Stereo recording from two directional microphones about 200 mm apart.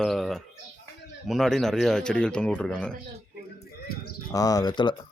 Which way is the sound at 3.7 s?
50° left (ahead or behind).